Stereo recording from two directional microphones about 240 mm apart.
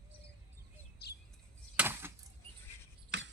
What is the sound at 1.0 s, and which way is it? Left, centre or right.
Chirp, left.